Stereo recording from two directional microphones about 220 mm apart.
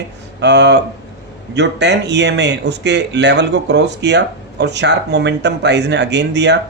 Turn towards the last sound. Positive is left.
turn(degrees=-50)  # may be behind; listen again after turning